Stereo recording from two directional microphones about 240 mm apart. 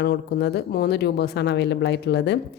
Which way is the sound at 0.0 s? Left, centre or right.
Left.